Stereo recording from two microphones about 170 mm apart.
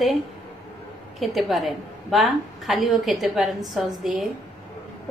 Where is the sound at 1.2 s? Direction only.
Centre (ahead or behind).